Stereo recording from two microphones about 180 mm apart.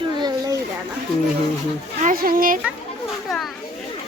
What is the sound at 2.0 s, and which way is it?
Speech, 55° right (ahead or behind).